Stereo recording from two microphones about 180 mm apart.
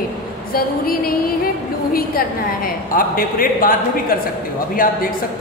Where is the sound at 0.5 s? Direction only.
55° left (ahead or behind).